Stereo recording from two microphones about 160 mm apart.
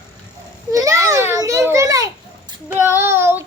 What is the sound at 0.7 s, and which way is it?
Children playing, 20° right (ahead or behind).